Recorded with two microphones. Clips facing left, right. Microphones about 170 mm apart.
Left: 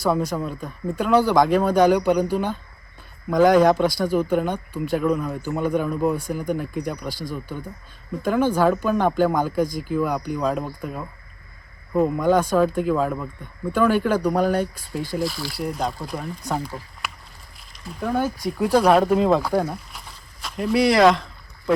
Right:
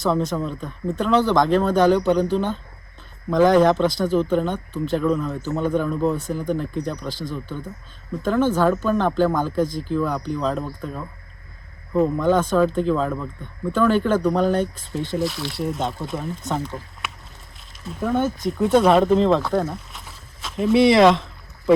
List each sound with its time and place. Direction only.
0.3 s speech: 5° left (ahead or behind)
19.1 s speech: 10° left (ahead or behind)
19.6 s a sound: centre (ahead or behind)